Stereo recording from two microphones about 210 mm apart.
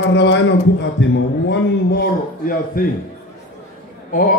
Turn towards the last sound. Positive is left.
turn(degrees=40)  # may be behind; listen again after turning